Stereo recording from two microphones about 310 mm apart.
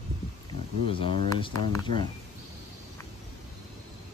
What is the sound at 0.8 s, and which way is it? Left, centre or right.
Speech, centre.